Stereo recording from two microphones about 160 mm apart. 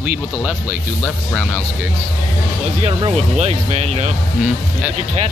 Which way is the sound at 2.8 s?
40° right (ahead or behind).